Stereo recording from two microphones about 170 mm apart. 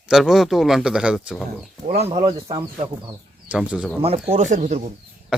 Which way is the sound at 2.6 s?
30° right (ahead or behind).